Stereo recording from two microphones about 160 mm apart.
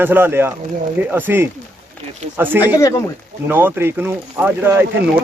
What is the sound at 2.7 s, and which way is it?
Speech, 20° left (ahead or behind).